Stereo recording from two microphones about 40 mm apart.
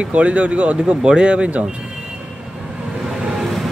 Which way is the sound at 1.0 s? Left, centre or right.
Right.